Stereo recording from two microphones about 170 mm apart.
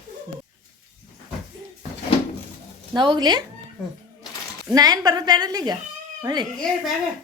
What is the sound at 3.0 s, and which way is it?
Speech, 25° right (ahead or behind).